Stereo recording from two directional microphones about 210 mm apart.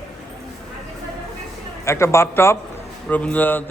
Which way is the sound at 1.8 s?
15° left (ahead or behind).